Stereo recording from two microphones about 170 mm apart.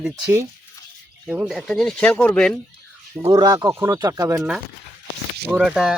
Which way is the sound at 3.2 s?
25° right (ahead or behind).